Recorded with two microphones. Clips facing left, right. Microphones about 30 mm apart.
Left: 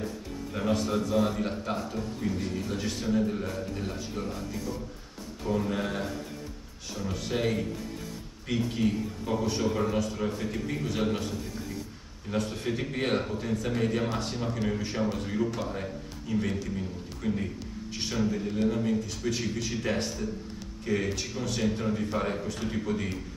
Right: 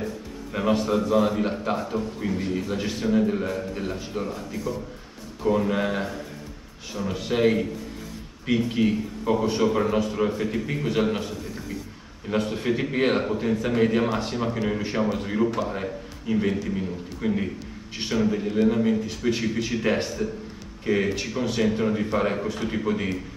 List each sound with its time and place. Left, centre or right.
0.5 s a man's voice: right
5.5 s a man's voice: right
12.3 s a man's voice: right
15.8 s a man's voice: right